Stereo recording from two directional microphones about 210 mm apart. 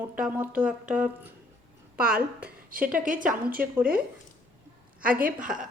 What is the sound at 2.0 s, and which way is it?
A woman's voice, 45° right (ahead or behind).